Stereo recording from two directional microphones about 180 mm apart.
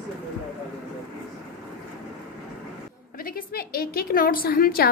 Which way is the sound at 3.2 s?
55° left (ahead or behind).